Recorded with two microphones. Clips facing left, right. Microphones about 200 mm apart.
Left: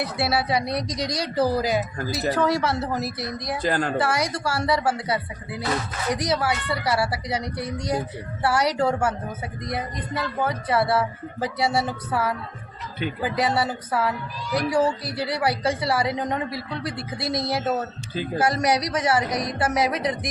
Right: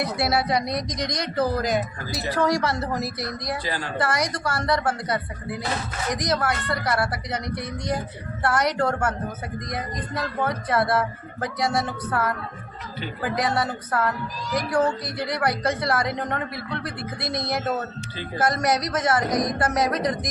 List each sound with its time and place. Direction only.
0.2 s a woman's voice: 5° left (ahead or behind)
3.6 s a woman's voice: 50° left (ahead or behind)
3.9 s a woman's voice: 5° left (ahead or behind)